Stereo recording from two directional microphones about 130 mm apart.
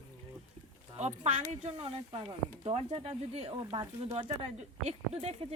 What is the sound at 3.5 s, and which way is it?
Speech, 35° right (ahead or behind).